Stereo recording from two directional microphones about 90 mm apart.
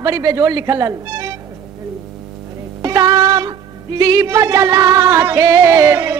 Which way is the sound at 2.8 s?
45° right (ahead or behind).